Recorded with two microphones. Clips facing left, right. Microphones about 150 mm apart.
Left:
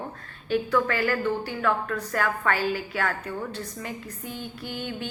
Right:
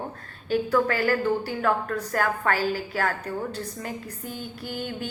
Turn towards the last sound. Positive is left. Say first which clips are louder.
# right 1 dB
turn(degrees=-45)  # may be behind; listen again after turning